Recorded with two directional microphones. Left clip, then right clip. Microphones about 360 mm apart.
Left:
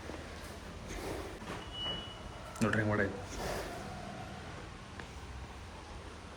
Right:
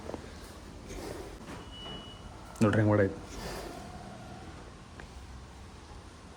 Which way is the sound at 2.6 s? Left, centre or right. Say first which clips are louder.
Right 6 dB; right.